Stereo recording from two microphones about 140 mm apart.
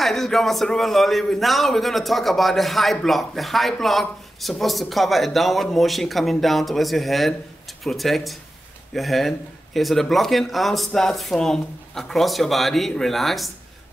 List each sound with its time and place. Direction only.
0.0 s a man's voice: centre (ahead or behind)